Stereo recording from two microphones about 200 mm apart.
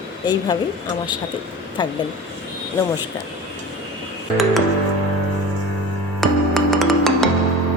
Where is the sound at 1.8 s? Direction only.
20° left (ahead or behind).